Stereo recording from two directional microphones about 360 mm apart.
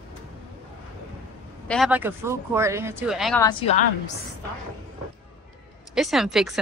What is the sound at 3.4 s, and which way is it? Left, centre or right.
Speech, centre.